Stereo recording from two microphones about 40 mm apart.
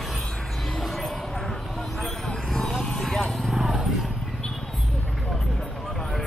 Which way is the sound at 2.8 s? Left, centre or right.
Centre.